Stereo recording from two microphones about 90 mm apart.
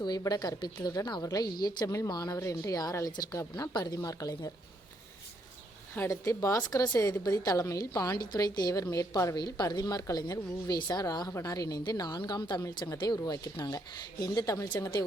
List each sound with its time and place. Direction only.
0.2 s a woman's voice: 45° left (ahead or behind)
3.5 s speech: 50° left (ahead or behind)
6.1 s a woman's voice: 35° left (ahead or behind); by 12.6 s 55° left (ahead or behind)
12.6 s a woman's voice: 40° left (ahead or behind)